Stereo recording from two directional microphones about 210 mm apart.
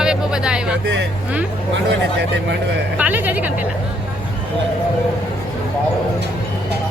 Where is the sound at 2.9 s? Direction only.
5° right (ahead or behind).